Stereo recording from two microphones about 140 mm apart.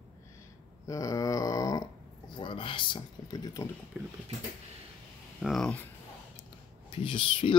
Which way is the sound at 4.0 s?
10° right (ahead or behind).